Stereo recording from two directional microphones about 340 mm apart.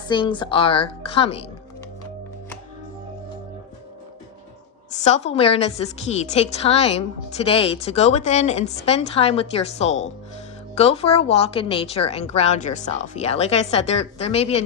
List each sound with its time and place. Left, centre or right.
0.1 s a woman's voice: centre
4.9 s a woman's voice: centre